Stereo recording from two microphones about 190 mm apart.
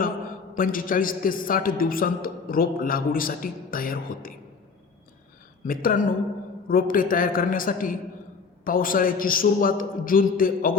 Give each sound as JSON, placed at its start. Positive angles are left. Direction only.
{"t": 0.5, "sound": "a man's voice", "side_deg": 45}
{"t": 5.6, "sound": "a man's voice", "side_deg": 50}